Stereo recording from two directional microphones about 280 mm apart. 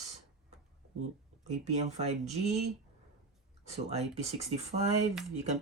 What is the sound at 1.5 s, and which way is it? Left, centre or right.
Speech, right.